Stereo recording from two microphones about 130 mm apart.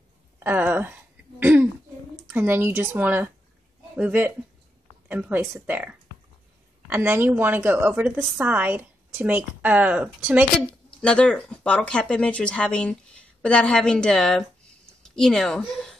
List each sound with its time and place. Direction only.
0.4 s a woman's voice: 15° right (ahead or behind)
11.0 s speech: 5° left (ahead or behind)